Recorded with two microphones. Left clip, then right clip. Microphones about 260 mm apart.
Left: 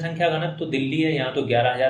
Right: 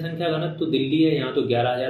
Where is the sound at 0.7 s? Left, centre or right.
Left.